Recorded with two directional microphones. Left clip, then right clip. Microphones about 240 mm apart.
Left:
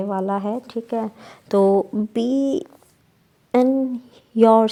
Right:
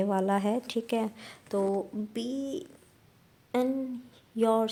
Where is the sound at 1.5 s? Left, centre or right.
Left.